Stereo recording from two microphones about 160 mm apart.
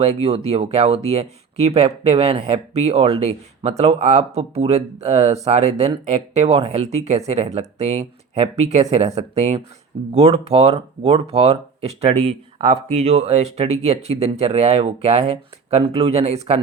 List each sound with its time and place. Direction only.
0.0 s speech: 40° right (ahead or behind)